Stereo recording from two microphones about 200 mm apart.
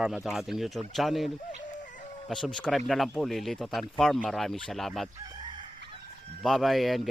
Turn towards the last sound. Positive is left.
turn(degrees=0)  # may be behind; listen again after turning